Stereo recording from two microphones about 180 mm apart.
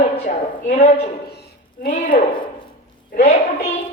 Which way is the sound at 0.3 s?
40° left (ahead or behind).